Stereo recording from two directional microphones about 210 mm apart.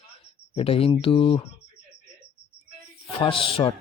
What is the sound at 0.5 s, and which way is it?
Speech, 25° left (ahead or behind).